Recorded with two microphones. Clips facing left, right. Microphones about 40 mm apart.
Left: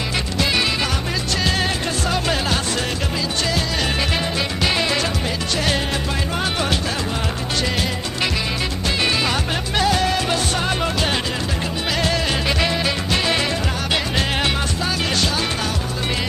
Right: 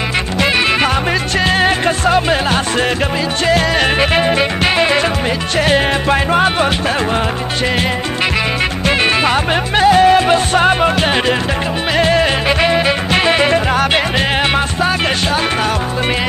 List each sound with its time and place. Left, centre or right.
1.4 s music: right
8.8 s music: right